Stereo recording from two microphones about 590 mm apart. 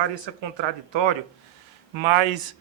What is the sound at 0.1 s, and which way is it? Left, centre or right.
A man's voice, right.